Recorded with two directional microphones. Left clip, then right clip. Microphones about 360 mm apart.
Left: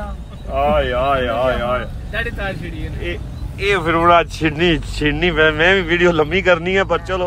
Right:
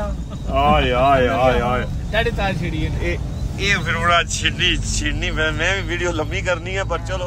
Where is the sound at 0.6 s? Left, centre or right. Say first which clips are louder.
Even; centre.